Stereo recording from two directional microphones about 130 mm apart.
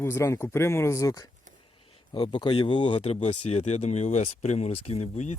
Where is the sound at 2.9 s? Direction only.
55° left (ahead or behind).